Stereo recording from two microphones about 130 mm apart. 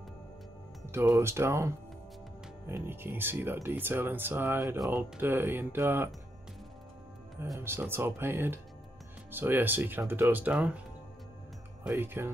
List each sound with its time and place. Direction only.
1.1 s speech: 20° right (ahead or behind)
7.5 s speech: 20° right (ahead or behind)
11.9 s speech: 15° right (ahead or behind)